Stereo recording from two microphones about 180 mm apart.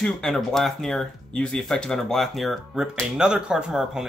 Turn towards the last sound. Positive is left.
turn(degrees=-5)  # may be behind; listen again after turning